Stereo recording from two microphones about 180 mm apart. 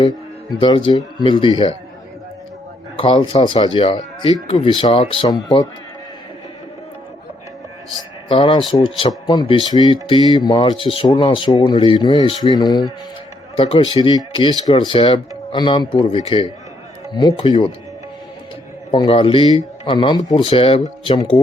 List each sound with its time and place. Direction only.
0.5 s speech: 25° left (ahead or behind)
3.0 s speech: 30° left (ahead or behind)
8.3 s speech: 30° left (ahead or behind)
18.9 s speech: 30° left (ahead or behind)